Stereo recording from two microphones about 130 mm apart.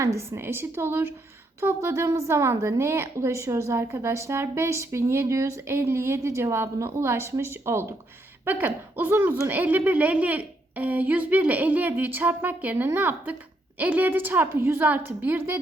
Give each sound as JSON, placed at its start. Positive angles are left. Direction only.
{"t": 0.0, "sound": "a woman's voice", "side_deg": -20}